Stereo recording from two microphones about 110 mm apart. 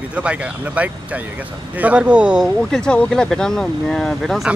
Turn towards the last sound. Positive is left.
turn(degrees=0)  # may be behind; listen again after turning